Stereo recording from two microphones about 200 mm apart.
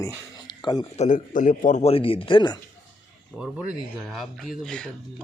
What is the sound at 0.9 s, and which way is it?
Speech, 40° left (ahead or behind).